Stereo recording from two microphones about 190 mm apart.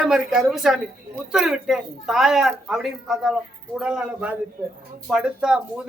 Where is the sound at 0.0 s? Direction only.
Centre (ahead or behind).